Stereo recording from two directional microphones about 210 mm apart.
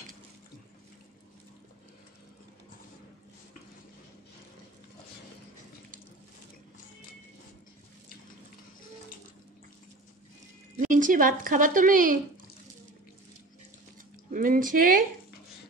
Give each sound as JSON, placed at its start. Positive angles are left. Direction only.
{"t": 10.8, "sound": "speech", "side_deg": -40}
{"t": 14.3, "sound": "speech", "side_deg": -40}